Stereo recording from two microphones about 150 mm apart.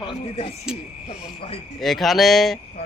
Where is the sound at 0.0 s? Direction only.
35° left (ahead or behind).